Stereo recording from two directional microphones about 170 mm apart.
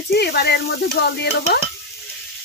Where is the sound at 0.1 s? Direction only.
70° left (ahead or behind).